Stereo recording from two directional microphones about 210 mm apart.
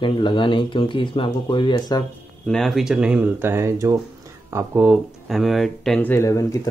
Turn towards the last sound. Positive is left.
turn(degrees=15)  # may be behind; listen again after turning